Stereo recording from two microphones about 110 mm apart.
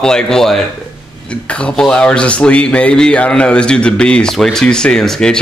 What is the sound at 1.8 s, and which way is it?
Speech, 10° left (ahead or behind).